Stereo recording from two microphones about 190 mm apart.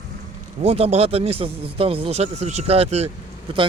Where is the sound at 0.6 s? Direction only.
30° right (ahead or behind).